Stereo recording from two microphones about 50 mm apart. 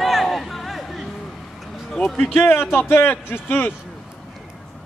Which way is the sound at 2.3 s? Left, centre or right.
Left.